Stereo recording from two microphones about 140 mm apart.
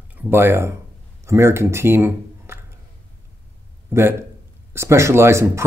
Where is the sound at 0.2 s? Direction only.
15° right (ahead or behind).